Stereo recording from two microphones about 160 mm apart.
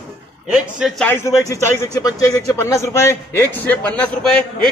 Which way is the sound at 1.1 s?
15° left (ahead or behind).